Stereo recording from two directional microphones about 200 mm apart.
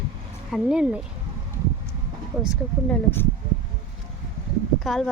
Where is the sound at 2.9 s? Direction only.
10° left (ahead or behind).